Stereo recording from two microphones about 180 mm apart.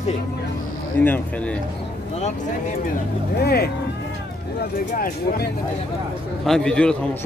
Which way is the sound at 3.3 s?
60° left (ahead or behind).